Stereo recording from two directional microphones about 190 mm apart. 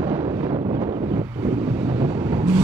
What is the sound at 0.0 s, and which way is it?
Wind noise, 30° right (ahead or behind).